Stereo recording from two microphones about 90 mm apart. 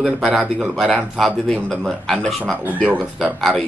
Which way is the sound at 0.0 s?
Centre (ahead or behind).